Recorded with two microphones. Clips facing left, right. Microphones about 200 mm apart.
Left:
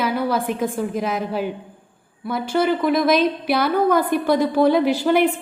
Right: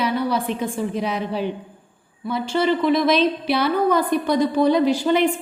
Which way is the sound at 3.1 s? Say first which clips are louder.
Left 1 dB; 50° left (ahead or behind).